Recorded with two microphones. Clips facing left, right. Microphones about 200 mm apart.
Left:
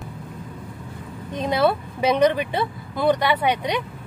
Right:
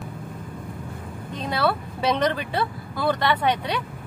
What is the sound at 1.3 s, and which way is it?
Speech, 20° left (ahead or behind).